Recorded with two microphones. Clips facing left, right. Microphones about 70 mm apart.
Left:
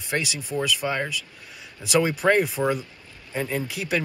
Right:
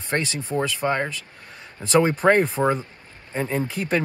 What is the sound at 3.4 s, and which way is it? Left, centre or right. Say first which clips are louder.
Speech: right 2 dB; right.